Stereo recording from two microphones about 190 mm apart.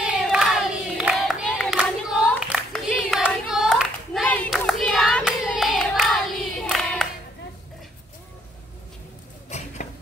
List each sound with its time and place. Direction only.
0.0 s crowd: 5° right (ahead or behind)
6.7 s singing: centre (ahead or behind)
9.5 s a sound: 40° left (ahead or behind)